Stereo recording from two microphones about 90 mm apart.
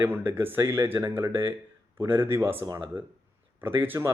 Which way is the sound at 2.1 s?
25° right (ahead or behind).